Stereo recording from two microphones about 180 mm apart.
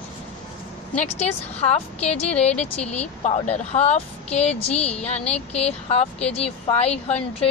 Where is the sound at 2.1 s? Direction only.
5° left (ahead or behind).